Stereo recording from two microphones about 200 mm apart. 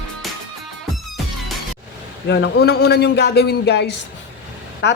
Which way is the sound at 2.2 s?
60° left (ahead or behind).